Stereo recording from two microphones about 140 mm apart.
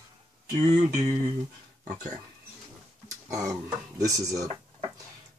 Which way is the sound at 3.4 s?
20° right (ahead or behind).